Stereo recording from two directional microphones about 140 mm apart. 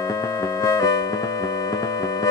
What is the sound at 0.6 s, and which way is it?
Music, 25° left (ahead or behind).